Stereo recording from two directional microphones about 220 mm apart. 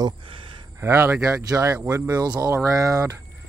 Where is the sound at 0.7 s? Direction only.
10° right (ahead or behind).